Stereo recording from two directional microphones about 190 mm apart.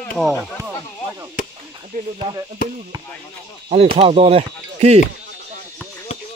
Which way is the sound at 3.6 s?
30° right (ahead or behind).